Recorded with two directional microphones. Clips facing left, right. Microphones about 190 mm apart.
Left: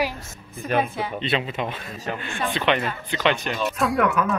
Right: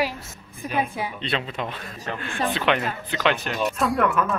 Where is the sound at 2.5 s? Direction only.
5° right (ahead or behind).